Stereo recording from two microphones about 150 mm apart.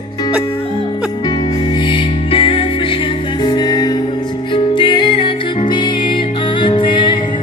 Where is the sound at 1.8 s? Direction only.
35° left (ahead or behind).